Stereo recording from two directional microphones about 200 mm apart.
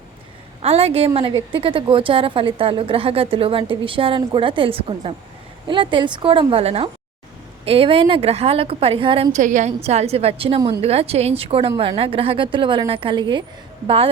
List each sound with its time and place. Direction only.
0.6 s a woman's voice: 30° right (ahead or behind)